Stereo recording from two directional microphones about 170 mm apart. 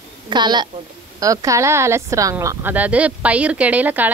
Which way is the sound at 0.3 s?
25° right (ahead or behind).